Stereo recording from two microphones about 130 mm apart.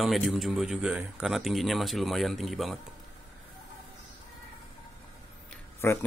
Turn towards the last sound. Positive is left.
turn(degrees=20)  # may be behind; listen again after turning